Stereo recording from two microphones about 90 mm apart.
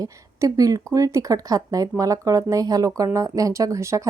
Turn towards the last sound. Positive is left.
turn(degrees=-35)  # may be behind; listen again after turning